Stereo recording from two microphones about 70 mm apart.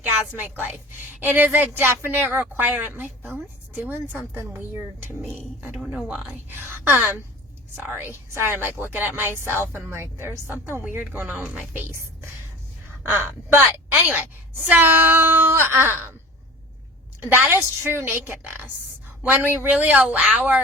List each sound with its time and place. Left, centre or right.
0.0 s a woman's voice: right
5.7 s speech: centre
6.5 s a woman's voice: right
13.0 s a woman's voice: right
17.8 s a woman's voice: right; by 20.6 s centre